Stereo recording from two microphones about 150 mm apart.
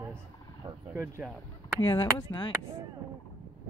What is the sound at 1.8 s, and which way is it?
Speech, 30° left (ahead or behind).